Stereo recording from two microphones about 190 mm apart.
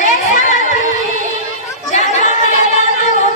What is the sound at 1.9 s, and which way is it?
Chatter, 40° left (ahead or behind).